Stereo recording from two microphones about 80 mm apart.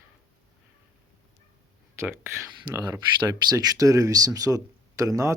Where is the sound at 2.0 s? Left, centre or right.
Right.